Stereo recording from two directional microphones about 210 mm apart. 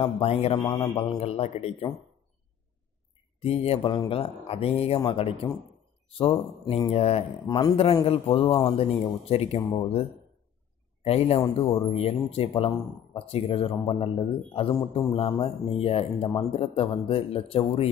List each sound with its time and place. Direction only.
0.0 s speech: 25° left (ahead or behind)
3.3 s speech: 30° left (ahead or behind)
6.6 s speech: 20° left (ahead or behind)
11.1 s speech: 30° left (ahead or behind)